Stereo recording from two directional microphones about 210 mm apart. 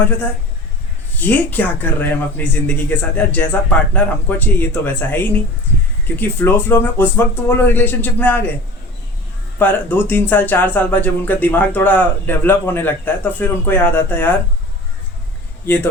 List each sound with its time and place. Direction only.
1.2 s speech: 5° left (ahead or behind)
9.6 s speech: 10° left (ahead or behind)
15.6 s speech: 10° left (ahead or behind)